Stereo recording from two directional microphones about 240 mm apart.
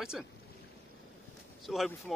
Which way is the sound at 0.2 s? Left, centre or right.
Centre.